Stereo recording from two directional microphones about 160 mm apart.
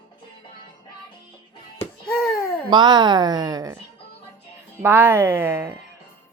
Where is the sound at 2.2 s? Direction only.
20° left (ahead or behind).